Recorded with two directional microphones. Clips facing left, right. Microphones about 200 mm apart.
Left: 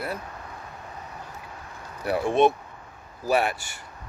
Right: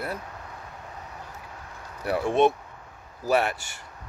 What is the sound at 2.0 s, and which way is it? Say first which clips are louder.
Speech: left 1 dB; 15° left (ahead or behind).